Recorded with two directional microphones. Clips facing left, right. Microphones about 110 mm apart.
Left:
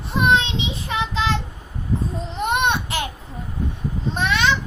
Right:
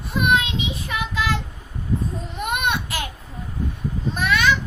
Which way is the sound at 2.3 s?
25° left (ahead or behind).